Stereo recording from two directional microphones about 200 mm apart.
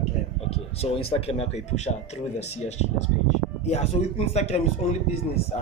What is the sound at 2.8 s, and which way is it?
Speech, 35° left (ahead or behind).